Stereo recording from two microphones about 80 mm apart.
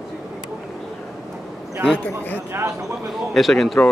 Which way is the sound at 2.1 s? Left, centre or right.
Left.